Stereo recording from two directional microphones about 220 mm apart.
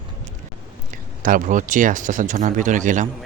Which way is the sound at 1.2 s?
40° right (ahead or behind).